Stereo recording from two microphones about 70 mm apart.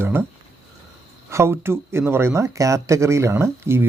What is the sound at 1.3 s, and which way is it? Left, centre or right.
Speech, right.